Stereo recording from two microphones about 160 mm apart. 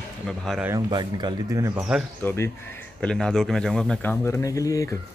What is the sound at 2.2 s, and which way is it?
Speech, 15° left (ahead or behind).